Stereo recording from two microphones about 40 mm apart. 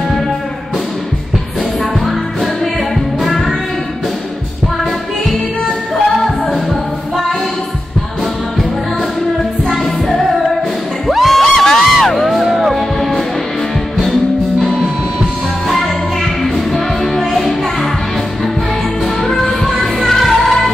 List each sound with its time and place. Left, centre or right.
2.0 s music: centre
11.1 s a sound: centre
11.5 s music: centre
12.3 s music: centre
16.4 s music: centre
19.6 s music: centre